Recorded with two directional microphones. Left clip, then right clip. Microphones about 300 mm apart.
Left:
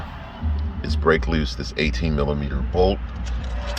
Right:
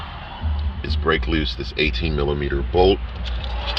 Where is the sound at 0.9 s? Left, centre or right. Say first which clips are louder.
Left 1 dB; left.